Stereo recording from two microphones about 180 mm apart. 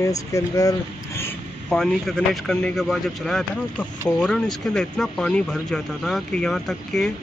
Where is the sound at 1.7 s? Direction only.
5° left (ahead or behind).